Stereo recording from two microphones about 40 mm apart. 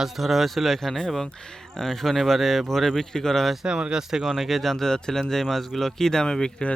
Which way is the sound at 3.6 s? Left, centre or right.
Right.